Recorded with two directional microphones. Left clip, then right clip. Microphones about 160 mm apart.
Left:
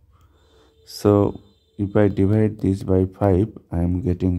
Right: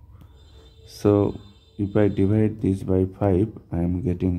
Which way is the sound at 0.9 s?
30° left (ahead or behind).